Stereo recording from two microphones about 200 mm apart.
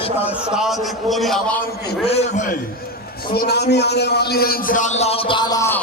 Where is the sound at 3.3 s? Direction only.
55° left (ahead or behind); by 5.8 s 15° left (ahead or behind).